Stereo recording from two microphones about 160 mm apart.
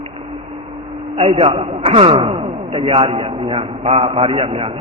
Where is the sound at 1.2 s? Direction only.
40° right (ahead or behind).